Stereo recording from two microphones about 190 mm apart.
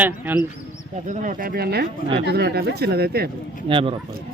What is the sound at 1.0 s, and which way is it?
Speech, 40° right (ahead or behind).